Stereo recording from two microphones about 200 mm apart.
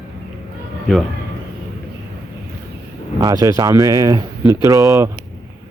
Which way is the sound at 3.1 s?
20° right (ahead or behind).